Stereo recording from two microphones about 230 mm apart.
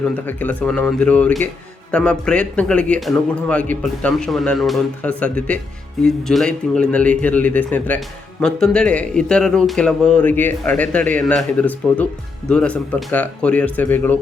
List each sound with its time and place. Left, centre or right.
0.3 s a man's voice: centre